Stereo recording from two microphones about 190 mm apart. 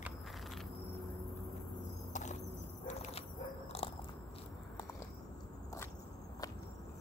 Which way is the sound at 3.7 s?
30° left (ahead or behind).